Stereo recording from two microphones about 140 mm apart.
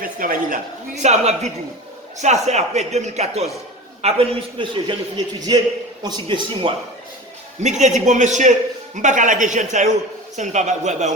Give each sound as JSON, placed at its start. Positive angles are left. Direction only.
{"t": 0.0, "sound": "speech", "side_deg": -80}
{"t": 1.0, "sound": "a man's voice", "side_deg": -50}
{"t": 4.0, "sound": "a man's voice", "side_deg": -40}
{"t": 7.6, "sound": "a man's voice", "side_deg": -60}